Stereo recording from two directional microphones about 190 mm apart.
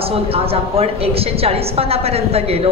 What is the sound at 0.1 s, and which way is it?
A woman's voice, 30° right (ahead or behind).